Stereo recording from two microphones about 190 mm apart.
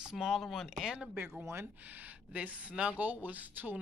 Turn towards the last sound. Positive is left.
turn(degrees=-10)  # may be behind; listen again after turning